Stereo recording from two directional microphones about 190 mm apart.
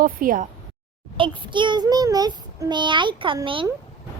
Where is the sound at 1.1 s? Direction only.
25° right (ahead or behind).